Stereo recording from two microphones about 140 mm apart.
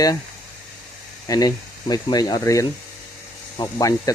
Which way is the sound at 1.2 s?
25° left (ahead or behind).